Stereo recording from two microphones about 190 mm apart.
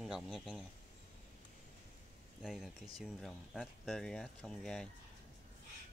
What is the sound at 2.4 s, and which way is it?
Speech, centre (ahead or behind).